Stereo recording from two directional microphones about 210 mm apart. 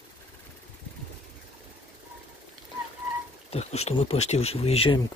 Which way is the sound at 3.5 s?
30° left (ahead or behind).